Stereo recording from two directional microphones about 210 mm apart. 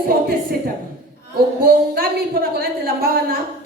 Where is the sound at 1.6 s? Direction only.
45° right (ahead or behind).